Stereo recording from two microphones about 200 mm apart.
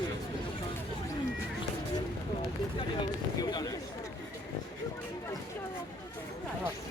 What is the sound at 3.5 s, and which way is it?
Speech, 20° left (ahead or behind).